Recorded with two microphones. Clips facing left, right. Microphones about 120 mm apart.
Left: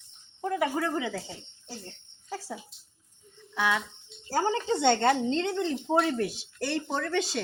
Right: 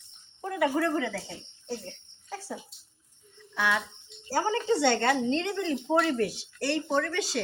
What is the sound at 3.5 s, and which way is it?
Speech, 20° left (ahead or behind).